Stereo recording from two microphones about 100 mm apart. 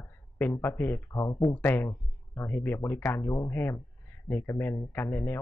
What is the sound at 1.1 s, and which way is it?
Speech, 35° left (ahead or behind).